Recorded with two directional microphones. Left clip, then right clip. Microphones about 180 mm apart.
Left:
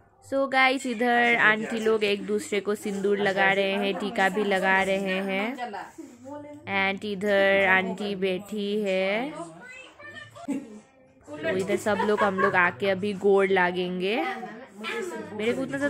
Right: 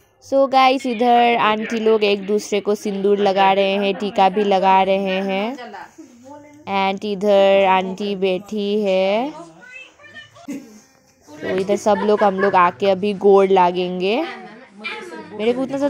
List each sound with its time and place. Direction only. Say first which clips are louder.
0.3 s speech: right 8 dB; 15° right (ahead or behind)
6.6 s speech: right 7 dB; 15° right (ahead or behind)
11.5 s speech: right 9 dB; 15° right (ahead or behind)
15.3 s a woman's voice: right 9 dB; 15° right (ahead or behind)